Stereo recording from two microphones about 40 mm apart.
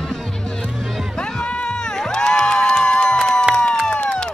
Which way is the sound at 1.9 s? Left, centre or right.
Centre.